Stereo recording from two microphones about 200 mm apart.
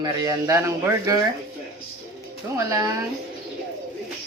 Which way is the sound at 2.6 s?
15° right (ahead or behind).